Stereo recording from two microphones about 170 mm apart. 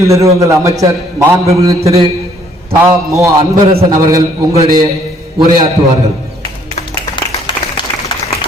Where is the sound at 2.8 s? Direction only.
20° right (ahead or behind).